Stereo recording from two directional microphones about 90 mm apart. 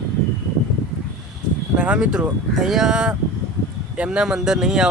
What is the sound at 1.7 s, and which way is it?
Speech, 10° right (ahead or behind).